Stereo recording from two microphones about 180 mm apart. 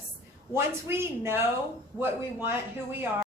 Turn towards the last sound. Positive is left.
turn(degrees=-10)  # may be behind; listen again after turning